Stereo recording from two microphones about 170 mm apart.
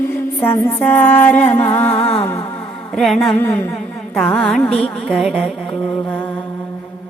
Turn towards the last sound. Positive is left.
turn(degrees=0)  # may be behind; listen again after turning